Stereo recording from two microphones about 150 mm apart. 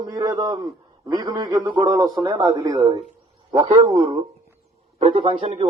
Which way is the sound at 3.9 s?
35° right (ahead or behind).